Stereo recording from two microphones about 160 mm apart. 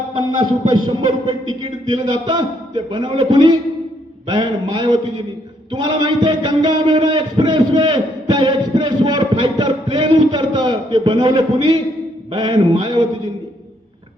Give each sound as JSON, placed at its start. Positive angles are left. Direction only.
{"t": 0.1, "sound": "a man's voice", "side_deg": -30}